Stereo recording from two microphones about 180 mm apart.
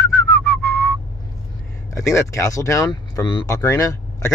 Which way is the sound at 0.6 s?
15° left (ahead or behind).